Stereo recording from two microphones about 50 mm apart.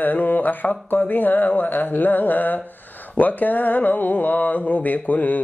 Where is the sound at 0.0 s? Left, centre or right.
Left.